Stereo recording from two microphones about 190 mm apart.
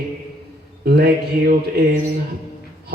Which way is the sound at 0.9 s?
55° right (ahead or behind).